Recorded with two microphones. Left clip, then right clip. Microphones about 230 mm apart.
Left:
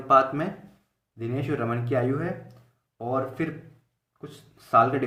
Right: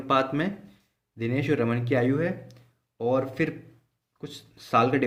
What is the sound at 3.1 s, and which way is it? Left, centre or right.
Speech, right.